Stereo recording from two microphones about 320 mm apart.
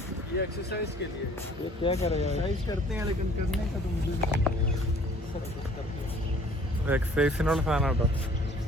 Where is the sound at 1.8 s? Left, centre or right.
Centre.